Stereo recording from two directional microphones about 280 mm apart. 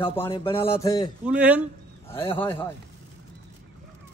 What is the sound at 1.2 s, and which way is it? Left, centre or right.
Speech, centre.